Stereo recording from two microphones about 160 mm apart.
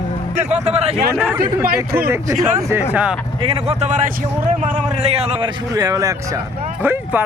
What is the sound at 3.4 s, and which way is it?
A man's voice, 40° right (ahead or behind).